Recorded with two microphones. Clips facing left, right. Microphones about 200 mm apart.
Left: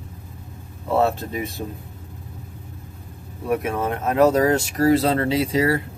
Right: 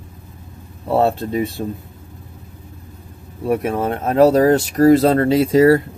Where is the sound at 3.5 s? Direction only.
30° right (ahead or behind).